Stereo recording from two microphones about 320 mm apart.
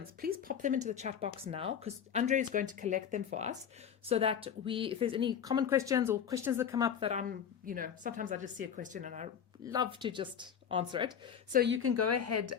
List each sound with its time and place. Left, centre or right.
0.2 s a woman's voice: right
11.5 s a woman's voice: right